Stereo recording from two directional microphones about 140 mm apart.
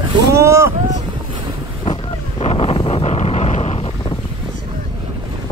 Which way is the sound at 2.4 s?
40° left (ahead or behind).